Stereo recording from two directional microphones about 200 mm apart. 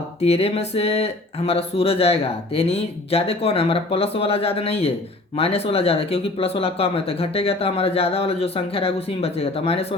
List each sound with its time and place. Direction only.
0.2 s speech: 30° left (ahead or behind)